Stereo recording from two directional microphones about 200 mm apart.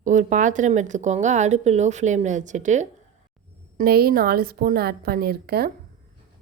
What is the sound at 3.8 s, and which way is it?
A woman's voice, 50° right (ahead or behind).